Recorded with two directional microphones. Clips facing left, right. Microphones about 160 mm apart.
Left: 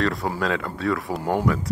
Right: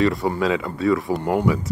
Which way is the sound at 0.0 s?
Centre (ahead or behind).